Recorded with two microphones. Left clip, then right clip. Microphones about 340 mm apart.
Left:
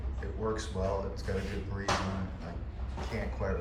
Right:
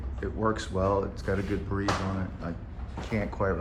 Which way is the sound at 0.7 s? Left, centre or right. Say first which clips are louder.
Right 9 dB; right.